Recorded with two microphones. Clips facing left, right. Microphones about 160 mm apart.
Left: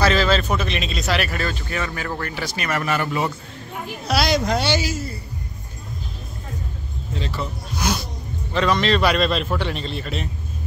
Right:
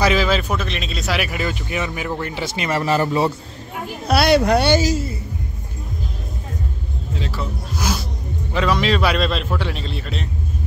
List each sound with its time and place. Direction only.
0.0 s speech: 10° right (ahead or behind)
0.6 s speech: centre (ahead or behind); by 3.3 s 30° right (ahead or behind)
4.1 s speech: 60° right (ahead or behind)
4.8 s a woman's voice: 30° right (ahead or behind)
7.2 s a man's voice: centre (ahead or behind)